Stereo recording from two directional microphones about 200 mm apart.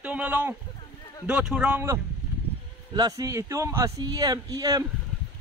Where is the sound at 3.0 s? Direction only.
20° right (ahead or behind).